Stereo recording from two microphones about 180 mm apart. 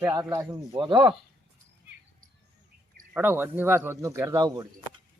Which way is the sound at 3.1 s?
10° right (ahead or behind).